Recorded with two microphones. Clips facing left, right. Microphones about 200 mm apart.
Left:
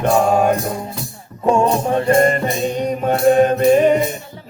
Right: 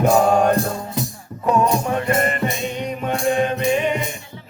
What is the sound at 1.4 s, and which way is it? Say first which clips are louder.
Music: left 3 dB; 30° left (ahead or behind).